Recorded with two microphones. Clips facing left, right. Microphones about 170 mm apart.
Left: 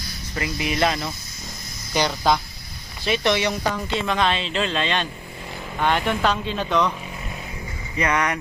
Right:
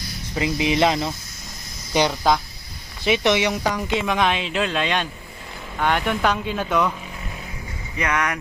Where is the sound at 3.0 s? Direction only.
15° right (ahead or behind).